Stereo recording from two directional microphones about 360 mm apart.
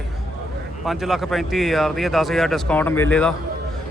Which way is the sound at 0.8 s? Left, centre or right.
Centre.